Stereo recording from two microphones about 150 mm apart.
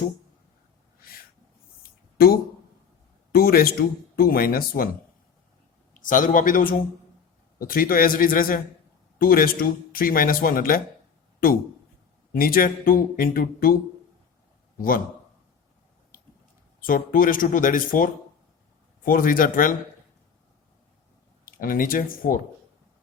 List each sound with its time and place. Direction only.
1.8 s a sound: 85° left
3.3 s speech: 85° left
5.9 s a man's voice: 60° left (ahead or behind)
12.3 s speech: 75° left (ahead or behind)
14.8 s speech: 70° left (ahead or behind)
16.8 s speech: 70° left (ahead or behind)
21.4 s speech: 70° left (ahead or behind)